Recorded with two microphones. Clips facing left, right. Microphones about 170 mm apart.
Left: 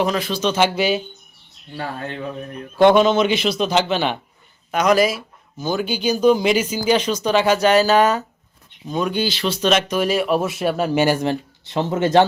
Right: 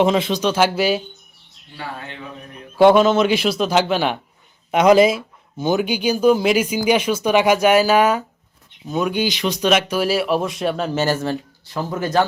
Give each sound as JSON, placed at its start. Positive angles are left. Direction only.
{"t": 0.0, "sound": "speech", "side_deg": -25}
{"t": 0.4, "sound": "speech", "side_deg": -5}
{"t": 1.7, "sound": "speech", "side_deg": 45}
{"t": 2.7, "sound": "speech", "side_deg": -5}
{"t": 4.7, "sound": "speech", "side_deg": -25}